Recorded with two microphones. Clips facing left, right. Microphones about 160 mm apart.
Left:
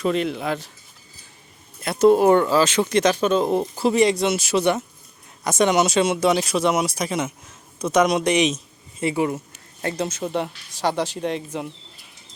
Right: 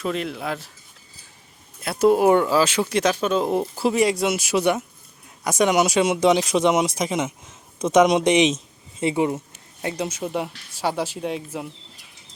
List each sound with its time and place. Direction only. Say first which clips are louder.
0.0 s speech: left 4 dB; centre (ahead or behind)
1.8 s speech: left 2 dB; 5° right (ahead or behind); by 9.4 s 20° right (ahead or behind)
9.8 s speech: left 1 dB; 10° right (ahead or behind)